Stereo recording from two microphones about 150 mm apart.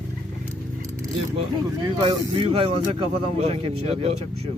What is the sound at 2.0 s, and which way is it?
Speech, 35° right (ahead or behind).